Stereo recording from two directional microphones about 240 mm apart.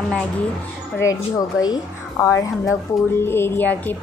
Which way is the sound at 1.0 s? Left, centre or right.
Centre.